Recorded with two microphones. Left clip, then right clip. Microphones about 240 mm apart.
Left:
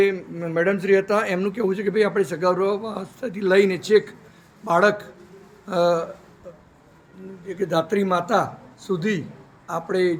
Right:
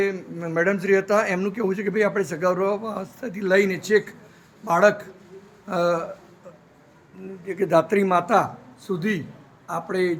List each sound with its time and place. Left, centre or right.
0.0 s speech: centre
7.4 s speech: centre